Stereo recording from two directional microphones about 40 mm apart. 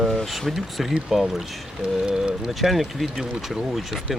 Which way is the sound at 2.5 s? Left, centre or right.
Centre.